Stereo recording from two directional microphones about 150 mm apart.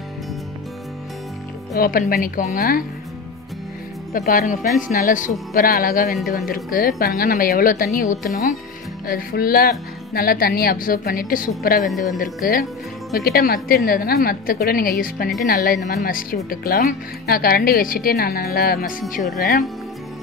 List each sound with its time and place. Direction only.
1.8 s speech: 75° left (ahead or behind)
4.3 s speech: 65° left (ahead or behind)
9.0 s speech: 75° left (ahead or behind)
13.1 s a woman's voice: 90° left; by 19.2 s 65° left (ahead or behind)